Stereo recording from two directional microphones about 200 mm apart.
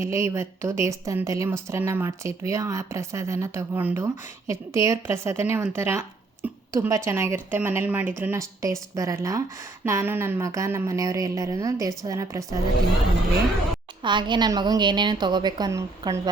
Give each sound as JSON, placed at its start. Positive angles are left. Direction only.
{"t": 0.0, "sound": "speech", "side_deg": -15}
{"t": 14.0, "sound": "a woman's voice", "side_deg": -25}